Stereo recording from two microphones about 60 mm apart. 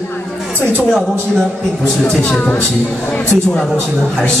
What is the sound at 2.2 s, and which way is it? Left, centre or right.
Speech, left.